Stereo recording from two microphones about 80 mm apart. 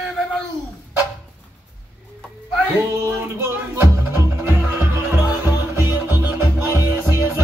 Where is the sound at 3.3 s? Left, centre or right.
Right.